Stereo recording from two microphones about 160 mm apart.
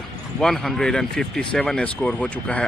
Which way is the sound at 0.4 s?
5° left (ahead or behind).